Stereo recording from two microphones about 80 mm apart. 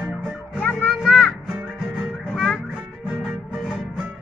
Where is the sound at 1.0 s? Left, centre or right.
Centre.